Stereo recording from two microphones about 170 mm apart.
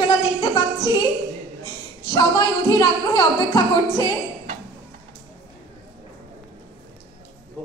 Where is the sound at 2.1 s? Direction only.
25° left (ahead or behind).